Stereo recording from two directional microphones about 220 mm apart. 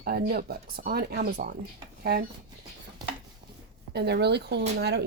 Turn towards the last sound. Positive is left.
turn(degrees=-50)  # may be behind; listen again after turning